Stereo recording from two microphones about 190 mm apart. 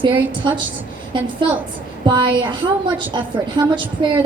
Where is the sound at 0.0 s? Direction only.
25° right (ahead or behind).